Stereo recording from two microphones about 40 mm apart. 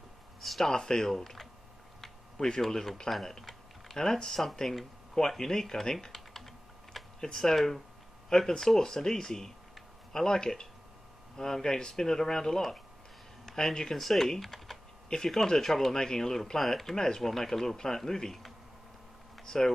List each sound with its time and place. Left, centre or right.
0.4 s speech: centre
0.7 s speech: centre
2.6 s speech: centre
5.4 s typing: centre
7.2 s speech: centre
19.4 s speech: centre